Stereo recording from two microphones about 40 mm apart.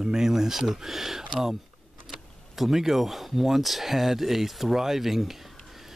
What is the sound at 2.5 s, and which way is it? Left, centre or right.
Speech, centre.